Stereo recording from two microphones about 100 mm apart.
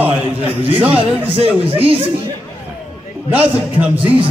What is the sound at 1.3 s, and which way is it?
Speech, 65° right (ahead or behind).